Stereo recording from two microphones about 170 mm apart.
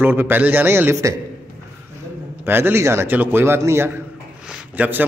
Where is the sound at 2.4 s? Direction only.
15° right (ahead or behind).